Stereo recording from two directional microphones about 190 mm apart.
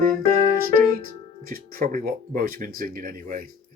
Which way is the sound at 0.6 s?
50° right (ahead or behind).